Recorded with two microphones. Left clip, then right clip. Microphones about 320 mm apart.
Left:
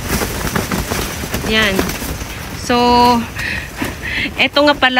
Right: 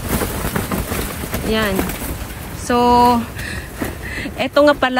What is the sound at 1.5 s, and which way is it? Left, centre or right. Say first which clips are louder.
Speech: left 5 dB; centre.